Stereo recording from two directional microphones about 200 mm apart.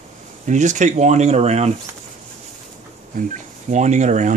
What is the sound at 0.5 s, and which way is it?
Speech, 35° right (ahead or behind).